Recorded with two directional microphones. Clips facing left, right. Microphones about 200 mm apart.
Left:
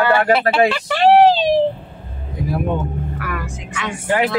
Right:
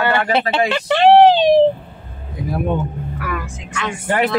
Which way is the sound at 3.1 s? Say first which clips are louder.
Right 1 dB; centre (ahead or behind).